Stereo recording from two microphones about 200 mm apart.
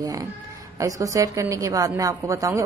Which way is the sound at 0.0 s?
15° right (ahead or behind).